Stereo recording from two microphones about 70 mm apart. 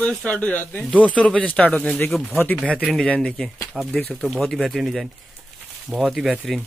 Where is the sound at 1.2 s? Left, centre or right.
Centre.